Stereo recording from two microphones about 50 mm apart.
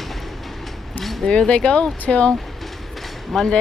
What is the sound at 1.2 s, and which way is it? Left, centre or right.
Speech, centre.